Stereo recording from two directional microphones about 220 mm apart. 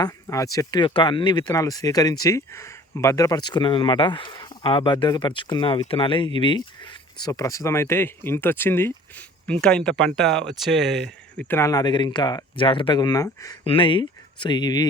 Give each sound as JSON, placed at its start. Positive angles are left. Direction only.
{"t": 0.0, "sound": "speech", "side_deg": 15}